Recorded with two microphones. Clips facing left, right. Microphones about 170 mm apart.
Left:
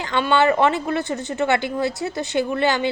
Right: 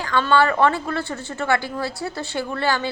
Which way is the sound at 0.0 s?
20° left (ahead or behind).